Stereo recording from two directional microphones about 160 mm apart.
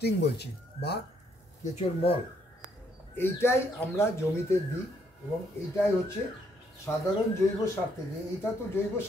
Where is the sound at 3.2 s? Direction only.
15° left (ahead or behind).